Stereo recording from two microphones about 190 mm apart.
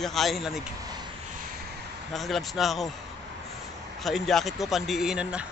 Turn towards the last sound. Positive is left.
turn(degrees=-5)  # may be behind; listen again after turning